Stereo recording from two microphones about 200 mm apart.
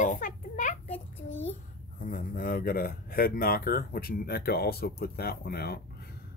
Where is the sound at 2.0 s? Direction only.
45° left (ahead or behind).